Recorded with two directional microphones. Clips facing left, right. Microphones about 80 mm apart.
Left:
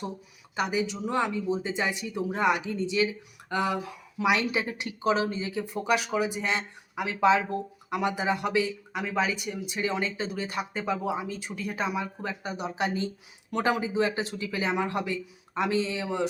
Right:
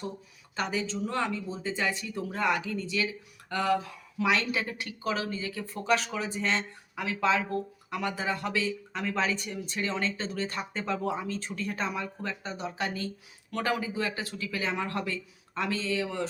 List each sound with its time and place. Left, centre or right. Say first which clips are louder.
0.5 s speech: left 3 dB; centre